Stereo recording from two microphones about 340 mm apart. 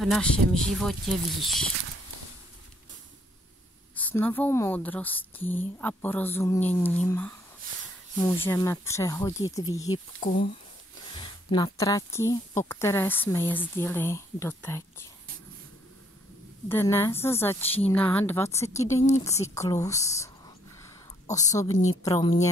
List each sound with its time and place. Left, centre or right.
0.0 s a woman's voice: centre
3.9 s a woman's voice: centre
10.2 s speech: left
11.1 s speech: centre
16.6 s speech: centre
19.2 s a sound: centre
22.0 s speech: centre